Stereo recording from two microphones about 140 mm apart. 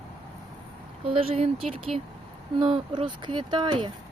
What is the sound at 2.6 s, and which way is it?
Speech, 35° right (ahead or behind).